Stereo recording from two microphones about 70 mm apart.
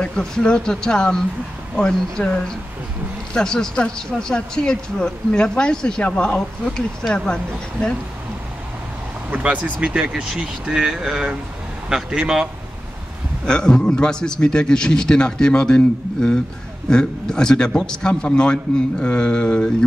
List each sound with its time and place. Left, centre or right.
0.0 s speech: centre
9.3 s speech: right
13.5 s speech: centre